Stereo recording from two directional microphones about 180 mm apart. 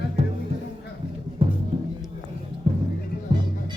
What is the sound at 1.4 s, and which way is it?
Music, 30° right (ahead or behind).